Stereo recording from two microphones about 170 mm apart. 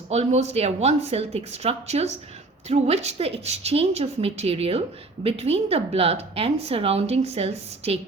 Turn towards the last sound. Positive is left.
turn(degrees=-35)  # may be behind; listen again after turning